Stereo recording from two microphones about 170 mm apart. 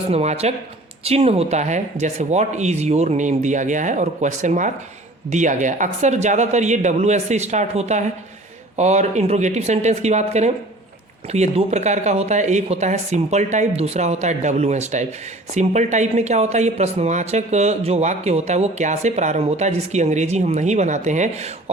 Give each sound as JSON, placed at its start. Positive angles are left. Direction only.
{"t": 0.1, "sound": "speech", "side_deg": -40}